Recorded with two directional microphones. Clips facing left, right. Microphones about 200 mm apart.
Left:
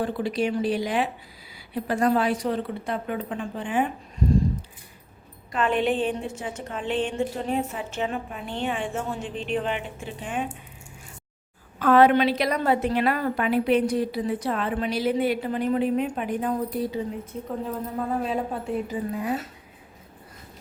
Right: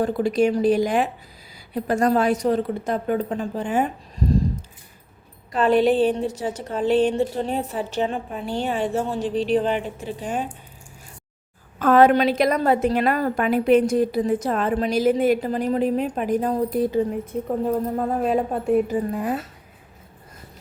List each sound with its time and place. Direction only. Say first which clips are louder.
0.0 s a woman's voice: right 6 dB; 45° right (ahead or behind)
5.5 s a woman's voice: right 6 dB; 35° right (ahead or behind)
11.8 s a woman's voice: right 2 dB; 45° right (ahead or behind)